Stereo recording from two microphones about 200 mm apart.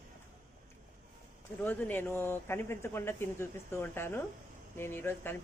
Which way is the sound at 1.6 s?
10° left (ahead or behind).